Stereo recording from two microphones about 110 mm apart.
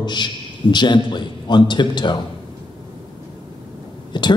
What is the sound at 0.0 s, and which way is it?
A man's voice, 40° left (ahead or behind).